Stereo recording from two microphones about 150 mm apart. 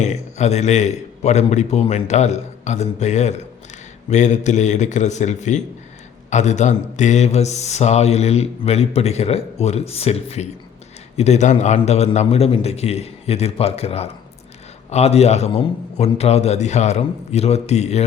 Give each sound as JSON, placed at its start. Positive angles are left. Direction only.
{"t": 0.0, "sound": "speech", "side_deg": 50}